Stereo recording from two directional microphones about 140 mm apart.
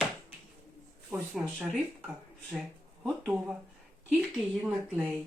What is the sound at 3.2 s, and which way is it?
Speech, 10° right (ahead or behind).